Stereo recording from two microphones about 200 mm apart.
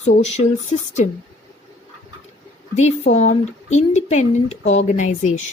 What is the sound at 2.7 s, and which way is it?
Speech, 35° left (ahead or behind).